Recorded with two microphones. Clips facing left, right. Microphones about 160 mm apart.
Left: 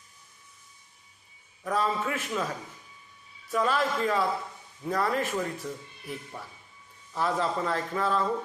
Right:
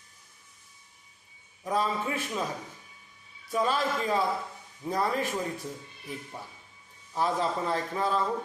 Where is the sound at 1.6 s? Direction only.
15° right (ahead or behind).